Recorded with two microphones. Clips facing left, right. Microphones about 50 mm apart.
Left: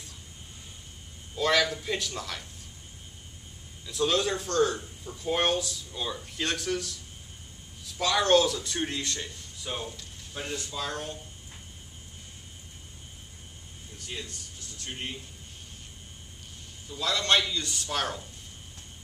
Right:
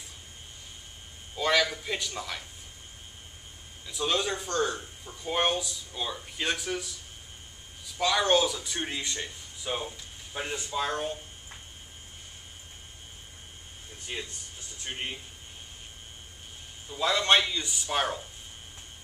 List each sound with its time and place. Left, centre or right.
1.3 s a man's voice: centre
3.8 s a man's voice: centre
13.9 s speech: right
16.9 s a man's voice: right